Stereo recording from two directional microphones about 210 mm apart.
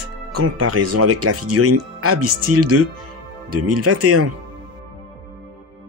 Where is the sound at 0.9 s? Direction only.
90° right.